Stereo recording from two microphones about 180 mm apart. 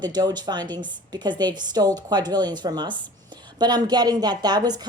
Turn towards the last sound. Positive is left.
turn(degrees=-20)  # may be behind; listen again after turning